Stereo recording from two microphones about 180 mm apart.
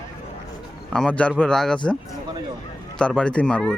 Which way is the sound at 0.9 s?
5° left (ahead or behind).